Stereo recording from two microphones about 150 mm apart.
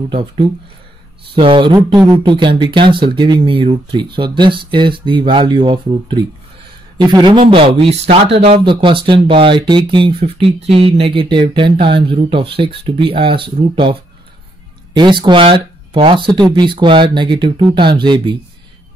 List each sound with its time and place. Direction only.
0.1 s speech: 35° right (ahead or behind)
15.0 s speech: 30° right (ahead or behind)